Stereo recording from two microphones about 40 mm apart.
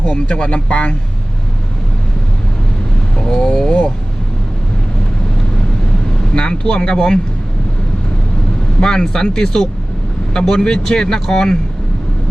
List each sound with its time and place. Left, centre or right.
0.0 s speech: left
3.2 s vehicle: centre
6.3 s speech: left
8.8 s speech: centre